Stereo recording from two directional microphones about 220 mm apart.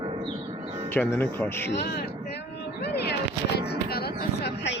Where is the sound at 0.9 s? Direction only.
10° left (ahead or behind).